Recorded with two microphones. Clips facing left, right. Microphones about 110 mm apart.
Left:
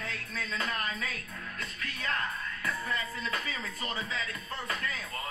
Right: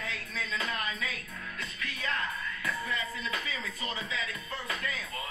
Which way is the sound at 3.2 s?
45° left (ahead or behind).